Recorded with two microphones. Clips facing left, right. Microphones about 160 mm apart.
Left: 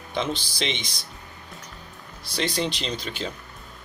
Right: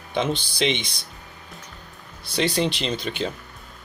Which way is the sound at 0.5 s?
5° right (ahead or behind).